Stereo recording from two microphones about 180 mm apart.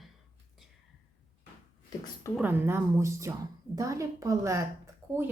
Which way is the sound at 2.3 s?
10° right (ahead or behind).